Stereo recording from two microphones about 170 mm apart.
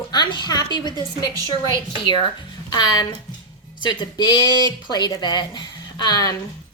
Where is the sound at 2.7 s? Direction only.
20° left (ahead or behind).